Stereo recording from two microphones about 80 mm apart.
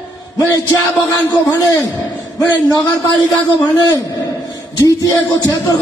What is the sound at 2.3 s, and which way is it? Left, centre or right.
Speech, left.